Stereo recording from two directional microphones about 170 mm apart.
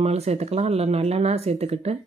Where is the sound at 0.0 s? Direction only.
40° right (ahead or behind).